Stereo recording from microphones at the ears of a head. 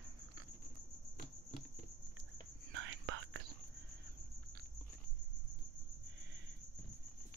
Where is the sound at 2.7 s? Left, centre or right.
Right.